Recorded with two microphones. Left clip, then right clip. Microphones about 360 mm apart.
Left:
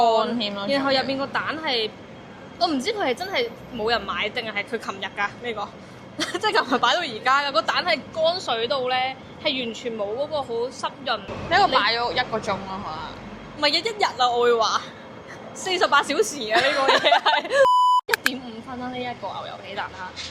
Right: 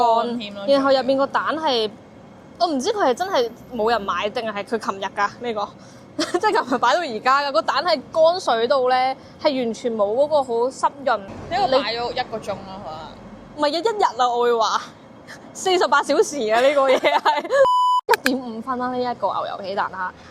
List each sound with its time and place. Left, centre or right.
0.0 s speech: centre
0.7 s a woman's voice: right
9.8 s a woman's voice: right
11.8 s a man's voice: centre
13.6 s a woman's voice: right
17.7 s beep: centre
18.1 s a sound: centre
19.3 s a woman's voice: right
19.6 s a woman's voice: right